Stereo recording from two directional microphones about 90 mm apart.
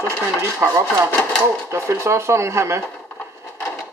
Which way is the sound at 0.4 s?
25° right (ahead or behind).